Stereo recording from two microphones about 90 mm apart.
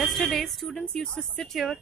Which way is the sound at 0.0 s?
Centre (ahead or behind).